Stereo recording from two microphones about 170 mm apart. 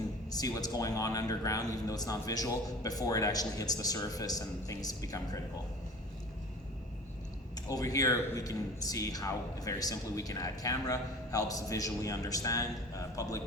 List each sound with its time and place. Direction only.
0.3 s a man's voice: 20° left (ahead or behind)
7.7 s a man's voice: 20° left (ahead or behind)